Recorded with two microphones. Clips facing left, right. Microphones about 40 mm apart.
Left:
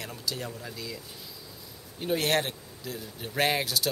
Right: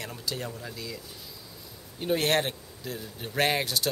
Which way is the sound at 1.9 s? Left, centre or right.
Centre.